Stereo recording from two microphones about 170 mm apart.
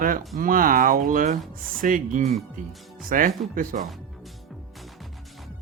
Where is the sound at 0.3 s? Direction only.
55° right (ahead or behind).